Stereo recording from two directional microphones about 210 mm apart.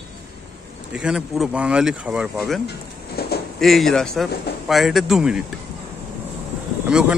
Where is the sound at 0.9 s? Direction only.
5° right (ahead or behind).